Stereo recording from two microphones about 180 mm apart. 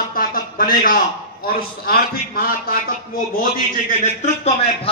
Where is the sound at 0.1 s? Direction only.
55° left (ahead or behind).